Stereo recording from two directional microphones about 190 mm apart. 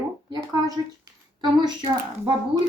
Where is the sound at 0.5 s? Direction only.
20° right (ahead or behind).